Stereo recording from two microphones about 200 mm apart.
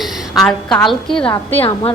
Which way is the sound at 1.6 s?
30° left (ahead or behind).